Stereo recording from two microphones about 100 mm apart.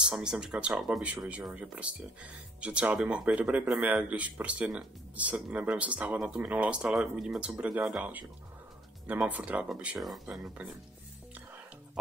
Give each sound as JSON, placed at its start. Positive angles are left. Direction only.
{"t": 0.0, "sound": "speech", "side_deg": -10}
{"t": 9.9, "sound": "speech", "side_deg": 0}
{"t": 10.6, "sound": "speech", "side_deg": -15}